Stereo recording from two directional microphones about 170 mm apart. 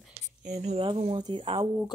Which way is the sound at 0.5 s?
35° right (ahead or behind).